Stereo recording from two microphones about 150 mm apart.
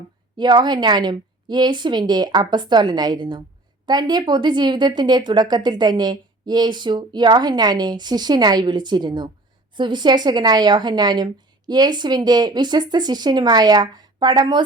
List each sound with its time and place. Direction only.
0.3 s a woman's voice: 30° right (ahead or behind)